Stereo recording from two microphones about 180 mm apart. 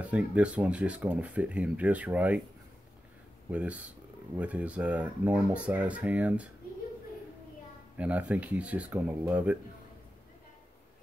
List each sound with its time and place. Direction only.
0.0 s speech: 5° right (ahead or behind)
3.4 s speech: 10° right (ahead or behind)
8.0 s speech: 5° right (ahead or behind)